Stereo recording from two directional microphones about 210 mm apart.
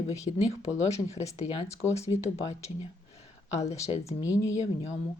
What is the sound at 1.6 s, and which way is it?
Speech, 15° left (ahead or behind).